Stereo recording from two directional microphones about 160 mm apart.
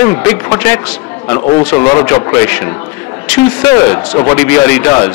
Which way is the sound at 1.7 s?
25° left (ahead or behind).